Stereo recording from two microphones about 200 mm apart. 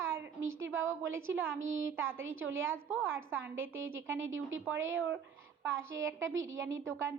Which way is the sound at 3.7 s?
85° right.